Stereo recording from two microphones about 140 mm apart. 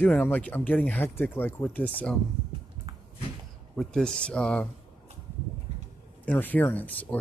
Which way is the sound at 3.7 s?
5° left (ahead or behind).